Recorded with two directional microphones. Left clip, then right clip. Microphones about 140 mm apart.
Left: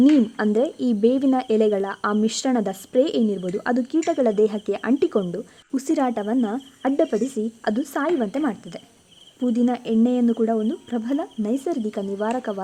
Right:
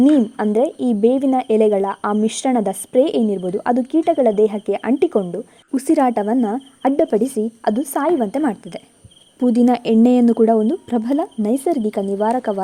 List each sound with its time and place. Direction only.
0.0 s a woman's voice: 15° right (ahead or behind)
5.7 s speech: 30° right (ahead or behind)
9.4 s speech: 45° right (ahead or behind)